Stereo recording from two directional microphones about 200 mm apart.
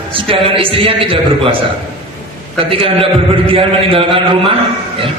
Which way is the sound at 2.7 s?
25° right (ahead or behind).